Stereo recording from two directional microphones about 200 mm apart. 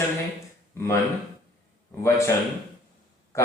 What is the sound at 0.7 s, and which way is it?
Speech, 15° left (ahead or behind).